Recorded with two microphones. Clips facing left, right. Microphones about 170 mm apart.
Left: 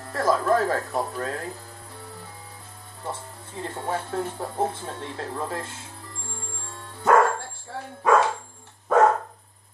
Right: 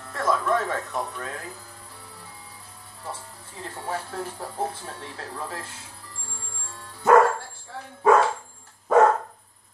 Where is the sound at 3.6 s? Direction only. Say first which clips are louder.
Left 3 dB; 25° left (ahead or behind).